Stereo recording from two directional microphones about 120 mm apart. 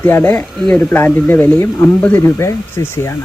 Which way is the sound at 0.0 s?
15° left (ahead or behind).